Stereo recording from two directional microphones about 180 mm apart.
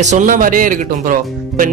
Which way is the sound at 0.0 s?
45° right (ahead or behind).